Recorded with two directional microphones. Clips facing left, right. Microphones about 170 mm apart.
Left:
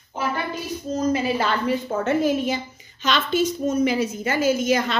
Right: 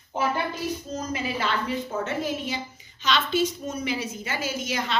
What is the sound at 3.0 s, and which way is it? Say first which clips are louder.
A woman's voice: left 3 dB; 50° left (ahead or behind).